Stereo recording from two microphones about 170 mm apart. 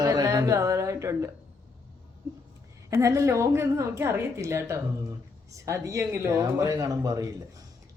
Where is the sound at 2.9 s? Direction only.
15° right (ahead or behind).